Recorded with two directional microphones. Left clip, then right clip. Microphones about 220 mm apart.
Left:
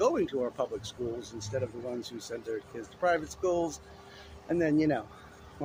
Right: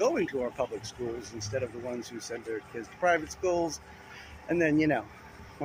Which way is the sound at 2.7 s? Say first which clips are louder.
Right 2 dB; centre (ahead or behind).